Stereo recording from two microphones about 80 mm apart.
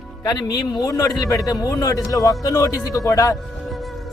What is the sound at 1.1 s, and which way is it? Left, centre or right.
A man's voice, left.